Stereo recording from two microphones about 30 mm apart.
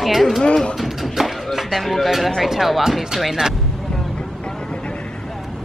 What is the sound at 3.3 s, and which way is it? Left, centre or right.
Speech, centre.